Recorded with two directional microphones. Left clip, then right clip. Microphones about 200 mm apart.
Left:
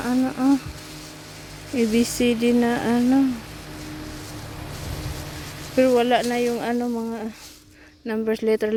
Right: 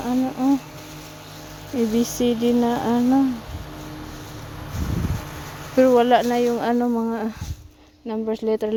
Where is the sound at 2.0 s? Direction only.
30° right (ahead or behind).